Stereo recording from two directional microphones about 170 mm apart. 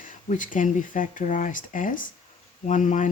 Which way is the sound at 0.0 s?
50° left (ahead or behind).